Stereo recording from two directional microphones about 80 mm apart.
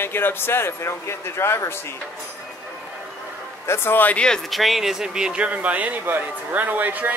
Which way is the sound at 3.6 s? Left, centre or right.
Left.